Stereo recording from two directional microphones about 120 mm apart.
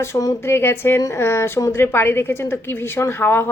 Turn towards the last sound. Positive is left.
turn(degrees=20)  # may be behind; listen again after turning